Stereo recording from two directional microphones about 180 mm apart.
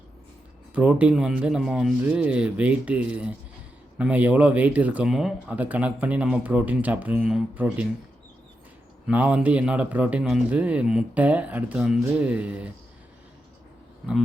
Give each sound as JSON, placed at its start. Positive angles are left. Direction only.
{"t": 0.7, "sound": "speech", "side_deg": -5}
{"t": 9.0, "sound": "speech", "side_deg": -5}